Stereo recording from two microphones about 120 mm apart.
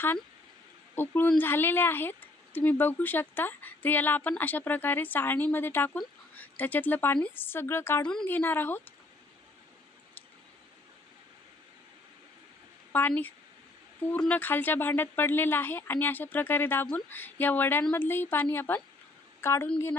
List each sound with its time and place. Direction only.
0.9 s speech: 15° left (ahead or behind)
12.9 s a woman's voice: 15° left (ahead or behind)